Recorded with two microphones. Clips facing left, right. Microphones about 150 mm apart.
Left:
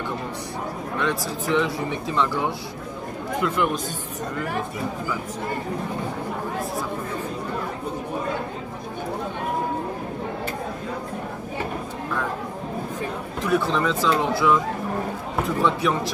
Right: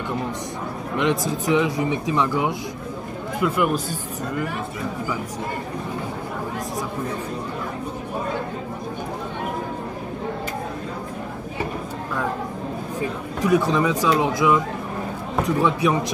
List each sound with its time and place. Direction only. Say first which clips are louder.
0.9 s speech: right 5 dB; 20° right (ahead or behind)
13.4 s speech: right 3 dB; 15° right (ahead or behind)
15.6 s speech: right 1 dB; 15° right (ahead or behind)